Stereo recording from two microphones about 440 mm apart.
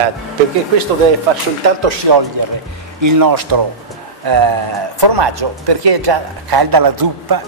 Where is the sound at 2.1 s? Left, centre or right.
Right.